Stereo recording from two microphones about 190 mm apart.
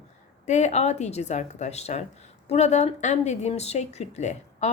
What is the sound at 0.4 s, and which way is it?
Speech, 40° left (ahead or behind).